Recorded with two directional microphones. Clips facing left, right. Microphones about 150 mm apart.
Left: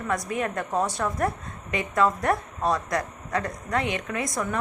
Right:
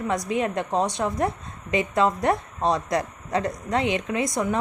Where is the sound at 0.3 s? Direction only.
25° right (ahead or behind).